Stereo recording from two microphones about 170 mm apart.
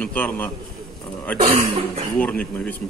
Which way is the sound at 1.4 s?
40° right (ahead or behind).